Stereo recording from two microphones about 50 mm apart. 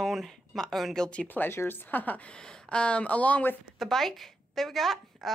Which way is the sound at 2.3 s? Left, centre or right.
Centre.